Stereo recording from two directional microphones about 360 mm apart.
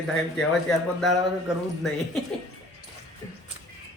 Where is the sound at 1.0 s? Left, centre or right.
Centre.